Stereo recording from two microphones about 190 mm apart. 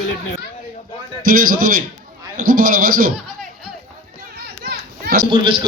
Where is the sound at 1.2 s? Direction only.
50° right (ahead or behind).